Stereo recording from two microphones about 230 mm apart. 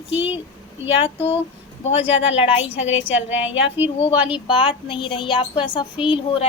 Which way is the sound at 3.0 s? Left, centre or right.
Left.